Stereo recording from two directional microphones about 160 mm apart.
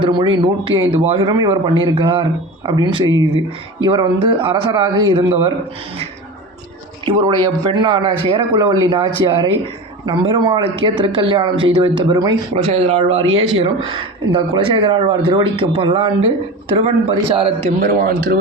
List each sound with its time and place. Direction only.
0.0 s a man's voice: 30° right (ahead or behind)
7.0 s a man's voice: 30° right (ahead or behind)
12.5 s speech: 40° right (ahead or behind)
17.8 s a man's voice: 75° right (ahead or behind)